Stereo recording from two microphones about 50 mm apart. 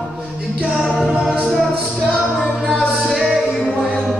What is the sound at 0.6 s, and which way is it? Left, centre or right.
A capella, right.